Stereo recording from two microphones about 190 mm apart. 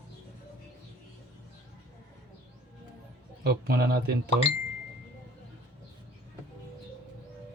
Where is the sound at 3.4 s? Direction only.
55° right (ahead or behind).